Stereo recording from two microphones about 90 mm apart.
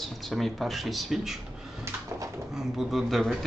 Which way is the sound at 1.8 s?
35° right (ahead or behind).